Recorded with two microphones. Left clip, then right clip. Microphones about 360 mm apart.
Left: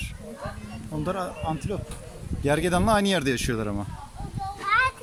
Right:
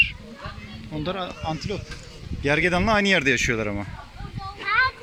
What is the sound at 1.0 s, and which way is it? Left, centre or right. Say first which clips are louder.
Speech: even; centre.